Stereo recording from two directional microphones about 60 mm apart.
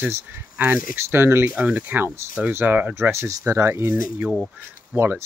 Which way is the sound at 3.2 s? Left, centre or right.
Right.